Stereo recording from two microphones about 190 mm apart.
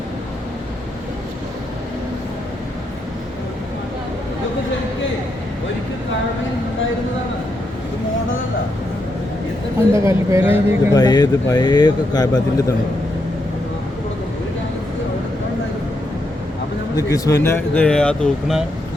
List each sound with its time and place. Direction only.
9.9 s speech: 15° right (ahead or behind)
10.9 s speech: 20° left (ahead or behind)
17.0 s speech: 15° left (ahead or behind)